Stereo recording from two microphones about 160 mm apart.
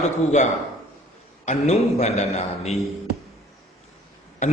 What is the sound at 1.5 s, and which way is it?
A man's voice, 40° left (ahead or behind).